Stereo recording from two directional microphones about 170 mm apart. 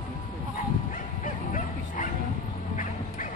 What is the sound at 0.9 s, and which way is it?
Bow-wow, 55° left (ahead or behind).